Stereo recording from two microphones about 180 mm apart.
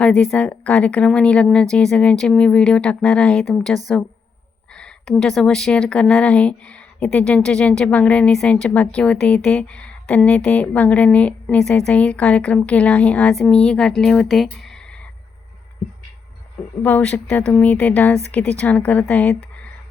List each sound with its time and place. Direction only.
0.0 s speech: 5° left (ahead or behind)
16.8 s a woman's voice: 10° left (ahead or behind)